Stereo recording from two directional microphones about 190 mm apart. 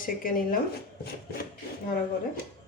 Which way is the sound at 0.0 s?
45° left (ahead or behind).